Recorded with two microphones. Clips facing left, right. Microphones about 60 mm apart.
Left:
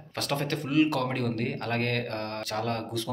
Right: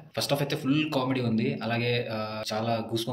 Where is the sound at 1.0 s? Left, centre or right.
Left.